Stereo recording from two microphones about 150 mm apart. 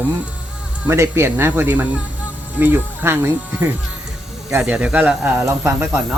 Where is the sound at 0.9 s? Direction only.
15° right (ahead or behind).